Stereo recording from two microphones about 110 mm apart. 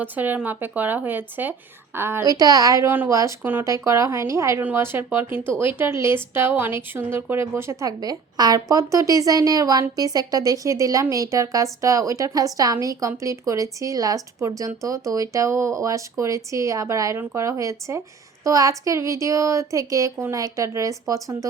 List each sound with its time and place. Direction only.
0.0 s speech: 15° right (ahead or behind)
2.2 s speech: 35° right (ahead or behind)